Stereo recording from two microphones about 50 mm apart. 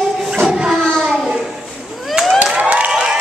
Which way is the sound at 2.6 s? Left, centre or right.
Right.